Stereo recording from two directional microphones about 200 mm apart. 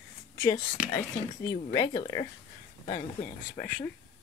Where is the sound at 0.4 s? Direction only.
15° left (ahead or behind).